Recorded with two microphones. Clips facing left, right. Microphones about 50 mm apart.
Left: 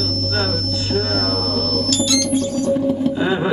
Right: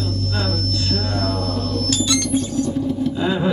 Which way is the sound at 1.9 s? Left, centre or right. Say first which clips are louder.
Left 1 dB; right.